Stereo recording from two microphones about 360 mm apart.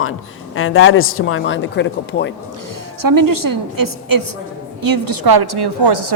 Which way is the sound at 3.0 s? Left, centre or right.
Right.